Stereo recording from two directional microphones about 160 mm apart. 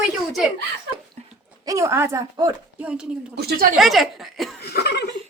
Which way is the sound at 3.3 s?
90° right.